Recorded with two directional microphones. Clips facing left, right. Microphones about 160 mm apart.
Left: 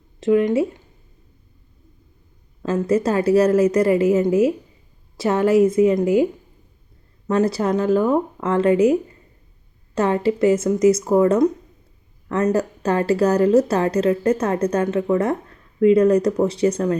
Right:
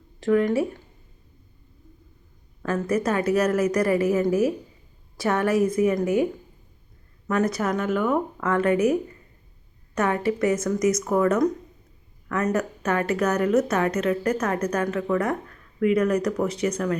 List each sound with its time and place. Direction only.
0.2 s a woman's voice: 20° left (ahead or behind)
2.6 s a woman's voice: 25° left (ahead or behind)
7.3 s a woman's voice: 30° left (ahead or behind)